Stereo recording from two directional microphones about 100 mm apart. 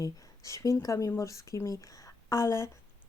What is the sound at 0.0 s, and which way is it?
Speech, 35° left (ahead or behind).